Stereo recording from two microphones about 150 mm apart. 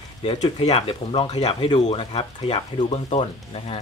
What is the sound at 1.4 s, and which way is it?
Speech, 50° left (ahead or behind).